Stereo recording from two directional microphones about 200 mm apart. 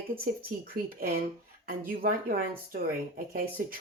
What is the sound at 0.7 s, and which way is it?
Speech, 45° right (ahead or behind).